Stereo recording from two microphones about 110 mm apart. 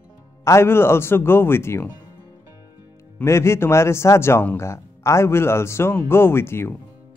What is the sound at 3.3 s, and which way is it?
Speech, 25° left (ahead or behind).